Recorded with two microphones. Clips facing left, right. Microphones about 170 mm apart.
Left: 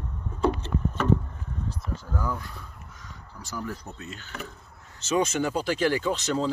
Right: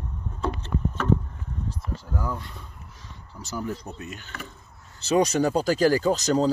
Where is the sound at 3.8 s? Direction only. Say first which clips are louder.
Right 3 dB; 15° right (ahead or behind).